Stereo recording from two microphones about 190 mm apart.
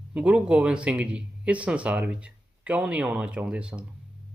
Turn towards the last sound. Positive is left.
turn(degrees=-5)  # may be behind; listen again after turning